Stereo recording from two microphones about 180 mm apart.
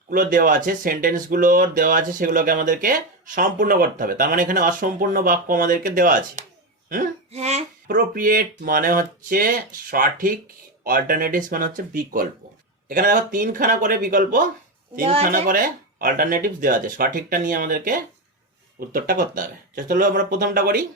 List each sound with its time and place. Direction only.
0.1 s speech: 50° right (ahead or behind)
7.9 s speech: 50° right (ahead or behind)
12.9 s speech: 50° right (ahead or behind)
15.0 s speech: 35° right (ahead or behind)
15.3 s speech: 50° right (ahead or behind)